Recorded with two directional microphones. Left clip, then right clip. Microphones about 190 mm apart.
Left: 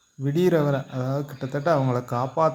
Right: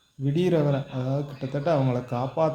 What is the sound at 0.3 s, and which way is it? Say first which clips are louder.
Speech: left 3 dB; 20° left (ahead or behind).